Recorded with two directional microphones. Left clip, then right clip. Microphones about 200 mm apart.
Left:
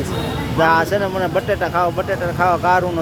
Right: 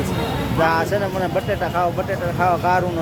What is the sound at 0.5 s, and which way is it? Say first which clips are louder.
Speech: left 4 dB; 20° left (ahead or behind).